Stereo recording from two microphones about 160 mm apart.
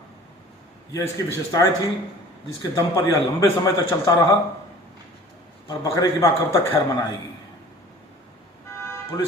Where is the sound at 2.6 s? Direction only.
25° left (ahead or behind).